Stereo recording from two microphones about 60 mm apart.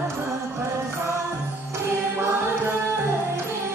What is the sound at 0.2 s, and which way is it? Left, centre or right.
Music, right.